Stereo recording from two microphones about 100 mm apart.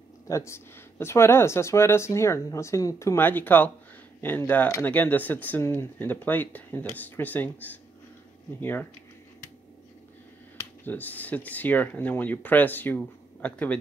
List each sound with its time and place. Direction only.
0.3 s speech: 30° left (ahead or behind)
10.9 s speech: 15° left (ahead or behind)